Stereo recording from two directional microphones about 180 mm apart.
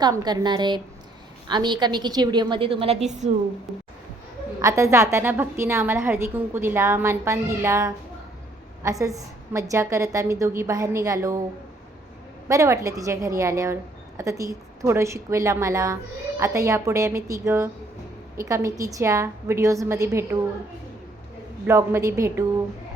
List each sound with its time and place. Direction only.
0.0 s a woman's voice: 20° right (ahead or behind); by 3.2 s 40° right (ahead or behind)
3.7 s speech: centre (ahead or behind)
4.6 s a woman's voice: 15° right (ahead or behind)
12.5 s a woman's voice: 15° right (ahead or behind)
21.7 s a woman's voice: 15° right (ahead or behind)